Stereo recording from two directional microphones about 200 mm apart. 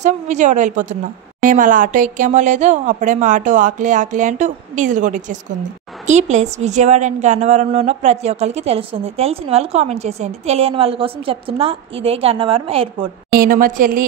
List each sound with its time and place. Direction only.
0.0 s a woman's voice: 35° right (ahead or behind)
13.3 s a woman's voice: 45° right (ahead or behind)